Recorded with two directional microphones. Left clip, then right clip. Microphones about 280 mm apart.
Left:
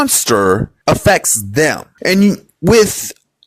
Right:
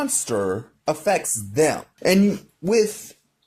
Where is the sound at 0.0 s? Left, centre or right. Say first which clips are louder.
Left 11 dB; left.